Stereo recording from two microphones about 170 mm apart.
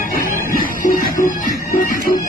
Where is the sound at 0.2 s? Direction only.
55° left (ahead or behind).